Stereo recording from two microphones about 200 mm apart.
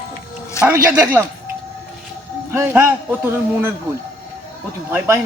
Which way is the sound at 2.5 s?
10° right (ahead or behind).